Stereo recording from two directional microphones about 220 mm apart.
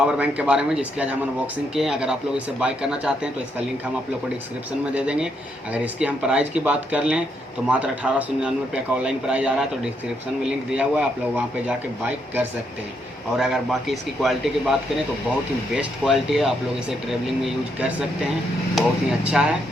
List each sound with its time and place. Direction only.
0.0 s a man's voice: 5° right (ahead or behind)
4.9 s a man's voice: 5° right (ahead or behind)